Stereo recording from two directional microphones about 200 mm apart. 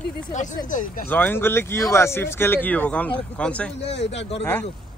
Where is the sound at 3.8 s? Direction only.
60° left (ahead or behind).